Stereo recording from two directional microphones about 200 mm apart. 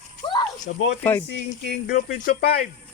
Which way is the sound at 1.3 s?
60° left (ahead or behind).